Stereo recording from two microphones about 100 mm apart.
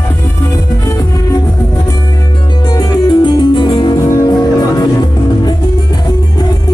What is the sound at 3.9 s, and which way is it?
Music, 30° left (ahead or behind).